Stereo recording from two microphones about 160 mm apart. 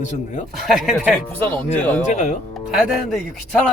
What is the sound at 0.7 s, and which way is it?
Speech, 5° right (ahead or behind).